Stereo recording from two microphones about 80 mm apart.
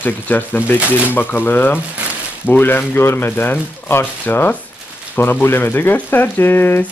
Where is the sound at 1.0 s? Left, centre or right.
Left.